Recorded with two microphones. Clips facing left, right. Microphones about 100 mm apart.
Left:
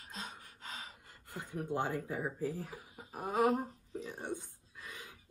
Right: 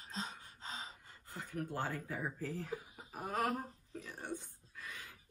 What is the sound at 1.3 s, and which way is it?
Speech, 20° left (ahead or behind).